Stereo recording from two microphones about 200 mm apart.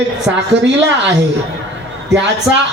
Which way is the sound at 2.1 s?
60° right (ahead or behind).